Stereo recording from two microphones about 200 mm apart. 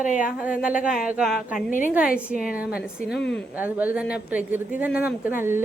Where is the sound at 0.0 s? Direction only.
40° left (ahead or behind).